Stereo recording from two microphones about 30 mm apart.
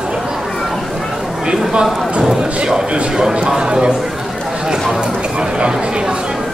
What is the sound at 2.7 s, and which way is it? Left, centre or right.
A man's voice, right.